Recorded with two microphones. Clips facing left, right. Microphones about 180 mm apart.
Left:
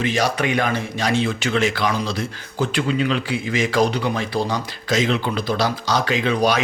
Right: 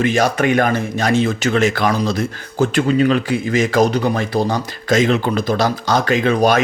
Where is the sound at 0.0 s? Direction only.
50° right (ahead or behind).